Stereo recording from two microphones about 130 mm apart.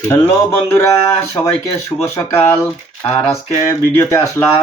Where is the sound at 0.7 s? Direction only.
20° left (ahead or behind).